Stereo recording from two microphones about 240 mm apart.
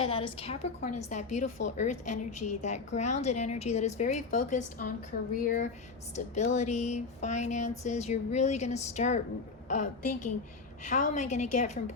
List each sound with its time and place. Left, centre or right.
0.0 s a woman's voice: left
2.0 s a woman's voice: left
2.6 s a woman's voice: left